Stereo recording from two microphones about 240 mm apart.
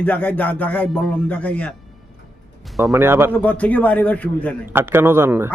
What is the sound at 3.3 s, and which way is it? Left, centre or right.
A man's voice, centre.